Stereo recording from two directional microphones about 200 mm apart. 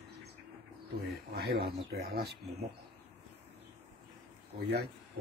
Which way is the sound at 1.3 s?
55° right (ahead or behind).